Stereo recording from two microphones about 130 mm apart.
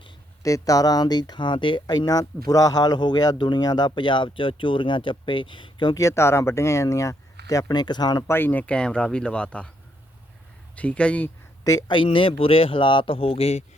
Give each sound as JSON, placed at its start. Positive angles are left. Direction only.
{"t": 0.4, "sound": "speech", "side_deg": 25}
{"t": 8.3, "sound": "speech", "side_deg": 15}
{"t": 10.8, "sound": "speech", "side_deg": 10}
{"t": 11.9, "sound": "speech", "side_deg": 40}